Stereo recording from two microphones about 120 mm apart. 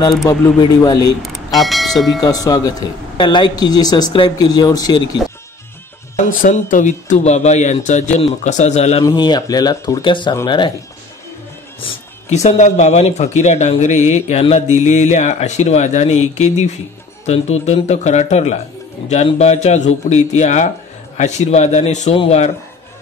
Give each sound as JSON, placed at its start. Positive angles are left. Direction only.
{"t": 0.6, "sound": "speech", "side_deg": 35}
{"t": 1.6, "sound": "speech", "side_deg": 0}
{"t": 2.2, "sound": "speech", "side_deg": 30}
{"t": 3.2, "sound": "speech", "side_deg": 40}
{"t": 6.1, "sound": "speech", "side_deg": 90}
{"t": 9.0, "sound": "speech", "side_deg": 35}
{"t": 10.0, "sound": "speech", "side_deg": 40}
{"t": 12.3, "sound": "speech", "side_deg": 70}
{"t": 22.1, "sound": "speech", "side_deg": 55}